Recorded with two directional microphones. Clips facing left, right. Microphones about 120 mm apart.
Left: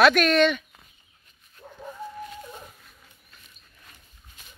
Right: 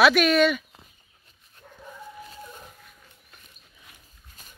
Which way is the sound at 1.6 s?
30° left (ahead or behind).